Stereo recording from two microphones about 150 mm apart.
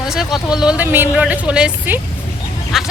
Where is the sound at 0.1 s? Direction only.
5° right (ahead or behind).